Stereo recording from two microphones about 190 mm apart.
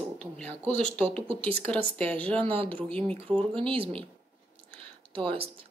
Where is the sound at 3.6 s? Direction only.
30° right (ahead or behind).